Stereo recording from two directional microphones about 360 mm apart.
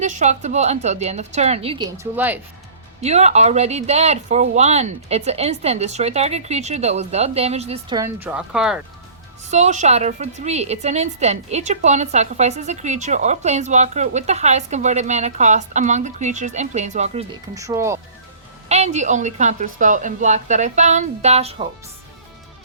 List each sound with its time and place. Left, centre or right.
0.0 s speech: centre
3.0 s speech: centre
9.5 s a woman's voice: centre
18.7 s a woman's voice: centre